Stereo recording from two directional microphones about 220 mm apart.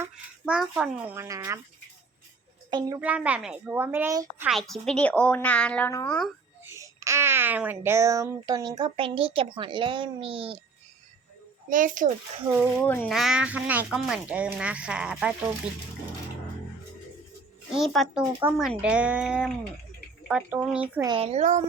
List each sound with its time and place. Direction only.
0.0 s speech: 5° right (ahead or behind)
2.6 s a child's voice: 20° right (ahead or behind)
3.0 s a woman's voice: 5° right (ahead or behind)
4.7 s speech: 5° left (ahead or behind)
6.7 s a child's voice: 15° right (ahead or behind)
11.7 s a child's voice: 35° right (ahead or behind)
12.5 s a woman's voice: 5° right (ahead or behind)
12.8 s speech: 5° left (ahead or behind)
17.7 s a woman's voice: centre (ahead or behind)
21.1 s speech: 25° right (ahead or behind)